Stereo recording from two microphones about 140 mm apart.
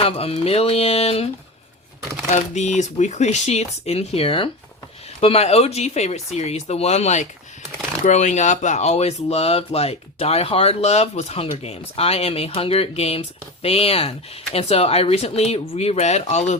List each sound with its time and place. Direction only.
0.0 s speech: 45° left (ahead or behind)
2.2 s speech: 55° left (ahead or behind)